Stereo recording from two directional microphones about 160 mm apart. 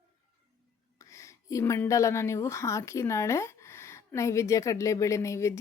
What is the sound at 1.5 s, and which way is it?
A woman's voice, 20° left (ahead or behind).